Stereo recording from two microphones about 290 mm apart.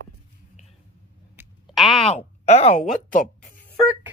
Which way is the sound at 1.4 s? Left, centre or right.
Centre.